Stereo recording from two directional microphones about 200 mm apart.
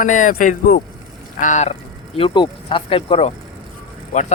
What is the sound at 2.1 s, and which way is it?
Speech, 25° left (ahead or behind).